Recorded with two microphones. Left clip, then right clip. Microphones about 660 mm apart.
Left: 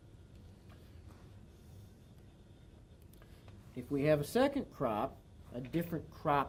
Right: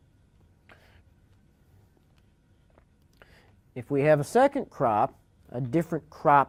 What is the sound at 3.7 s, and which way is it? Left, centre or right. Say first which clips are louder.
Speech: right 9 dB; right.